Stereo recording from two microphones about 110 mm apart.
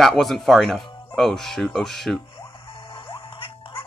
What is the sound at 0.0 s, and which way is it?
Speech, centre (ahead or behind).